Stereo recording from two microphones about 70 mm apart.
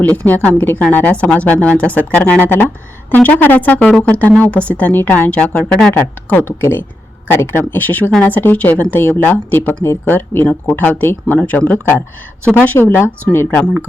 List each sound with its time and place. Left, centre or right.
0.0 s speech: left
5.3 s speech: centre
5.9 s speech: left
13.3 s speech: left